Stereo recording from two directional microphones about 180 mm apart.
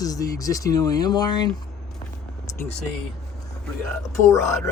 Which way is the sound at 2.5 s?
15° left (ahead or behind).